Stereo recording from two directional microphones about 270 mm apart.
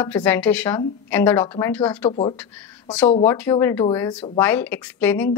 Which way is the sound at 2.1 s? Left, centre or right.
Centre.